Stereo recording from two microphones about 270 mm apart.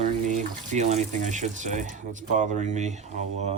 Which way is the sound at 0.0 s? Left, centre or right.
Right.